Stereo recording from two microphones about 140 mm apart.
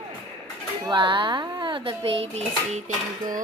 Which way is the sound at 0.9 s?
35° right (ahead or behind).